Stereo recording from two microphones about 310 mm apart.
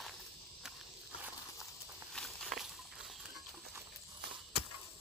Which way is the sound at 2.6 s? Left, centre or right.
Centre.